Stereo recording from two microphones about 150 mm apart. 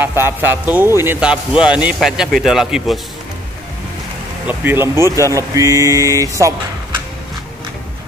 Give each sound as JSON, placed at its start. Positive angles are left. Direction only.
{"t": 0.0, "sound": "a man's voice", "side_deg": -15}
{"t": 4.5, "sound": "speech", "side_deg": -15}